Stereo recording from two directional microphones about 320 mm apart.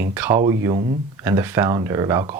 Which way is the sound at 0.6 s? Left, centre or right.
Centre.